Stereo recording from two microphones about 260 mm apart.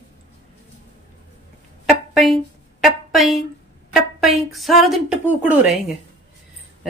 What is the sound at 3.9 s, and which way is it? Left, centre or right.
Speech, centre.